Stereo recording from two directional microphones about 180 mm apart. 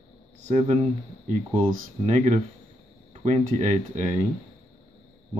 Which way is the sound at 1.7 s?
45° right (ahead or behind).